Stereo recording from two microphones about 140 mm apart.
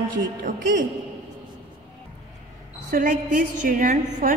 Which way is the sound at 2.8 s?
90° right.